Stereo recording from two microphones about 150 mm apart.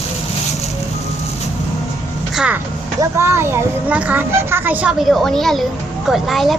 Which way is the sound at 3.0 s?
20° right (ahead or behind).